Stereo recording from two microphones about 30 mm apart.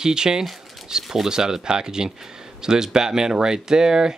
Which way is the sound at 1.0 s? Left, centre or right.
Centre.